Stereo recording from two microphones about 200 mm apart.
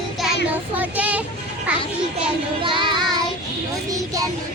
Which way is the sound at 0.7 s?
10° right (ahead or behind).